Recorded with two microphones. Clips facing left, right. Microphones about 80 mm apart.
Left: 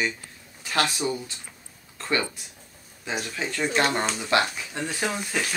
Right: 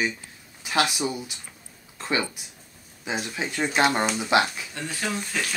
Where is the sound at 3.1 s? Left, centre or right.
Centre.